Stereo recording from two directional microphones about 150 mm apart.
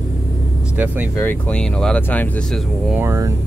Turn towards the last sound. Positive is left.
turn(degrees=-20)  # may be behind; listen again after turning